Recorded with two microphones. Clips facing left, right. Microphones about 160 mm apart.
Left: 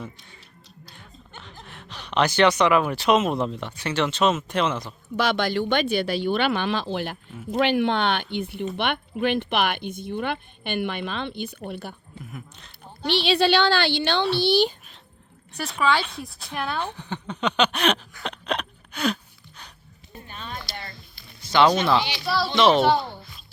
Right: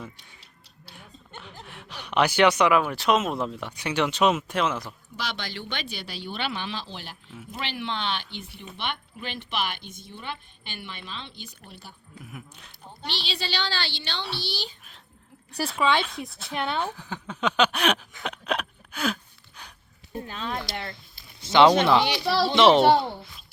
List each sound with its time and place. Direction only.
0.9 s speech: 10° right (ahead or behind)
5.1 s speech: 55° left (ahead or behind)
12.2 s speech: 10° right (ahead or behind)
13.1 s speech: 60° left (ahead or behind)
16.0 s speech: centre (ahead or behind)
16.6 s a child's voice: 25° right (ahead or behind)
16.8 s speech: 5° right (ahead or behind)
18.2 s a sound: 5° right (ahead or behind)
20.2 s speech: 90° right; by 20.9 s 65° right (ahead or behind)
21.4 s a child's voice: 25° right (ahead or behind)